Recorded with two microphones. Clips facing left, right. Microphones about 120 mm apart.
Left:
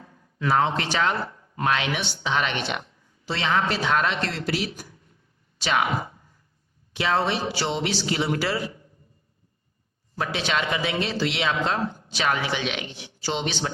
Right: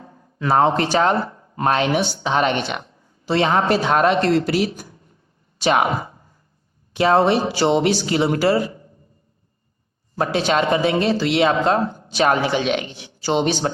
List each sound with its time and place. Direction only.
0.0 s speech: 35° right (ahead or behind)
10.2 s speech: 40° right (ahead or behind)